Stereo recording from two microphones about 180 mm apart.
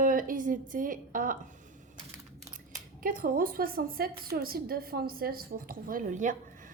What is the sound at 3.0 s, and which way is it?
A woman's voice, 50° right (ahead or behind).